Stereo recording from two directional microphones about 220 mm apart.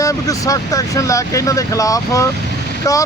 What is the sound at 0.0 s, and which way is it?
Speech, 15° left (ahead or behind).